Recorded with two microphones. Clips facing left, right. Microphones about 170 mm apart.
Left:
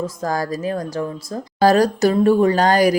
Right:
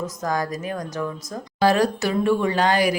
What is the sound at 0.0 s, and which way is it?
Speech, 30° left (ahead or behind).